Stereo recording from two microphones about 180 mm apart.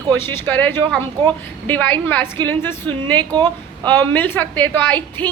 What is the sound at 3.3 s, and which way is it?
Speech, 25° right (ahead or behind).